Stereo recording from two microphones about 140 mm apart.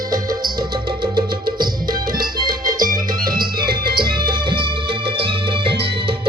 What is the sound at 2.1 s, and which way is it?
Music, 90° right.